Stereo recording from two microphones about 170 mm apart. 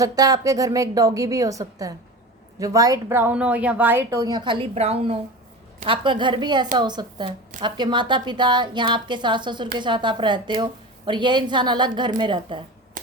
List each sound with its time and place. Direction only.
0.0 s a woman's voice: 20° right (ahead or behind)